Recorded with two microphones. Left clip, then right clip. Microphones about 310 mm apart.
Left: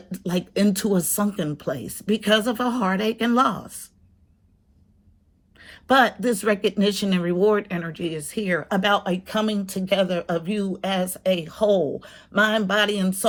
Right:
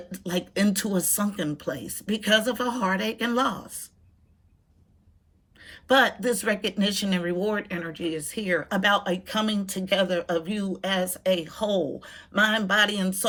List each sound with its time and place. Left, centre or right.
0.1 s speech: centre
5.5 s a sound: centre
5.9 s speech: centre
8.2 s speech: left
9.2 s speech: centre